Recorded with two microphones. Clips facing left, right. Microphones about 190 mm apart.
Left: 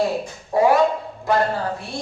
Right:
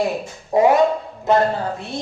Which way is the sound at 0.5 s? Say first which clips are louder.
Right 2 dB; 20° right (ahead or behind).